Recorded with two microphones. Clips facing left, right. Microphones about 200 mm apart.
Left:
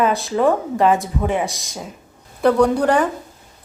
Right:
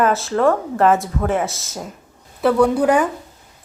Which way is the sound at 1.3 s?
15° left (ahead or behind).